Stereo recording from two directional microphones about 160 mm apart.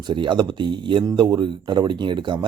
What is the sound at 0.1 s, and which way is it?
Speech, 30° right (ahead or behind).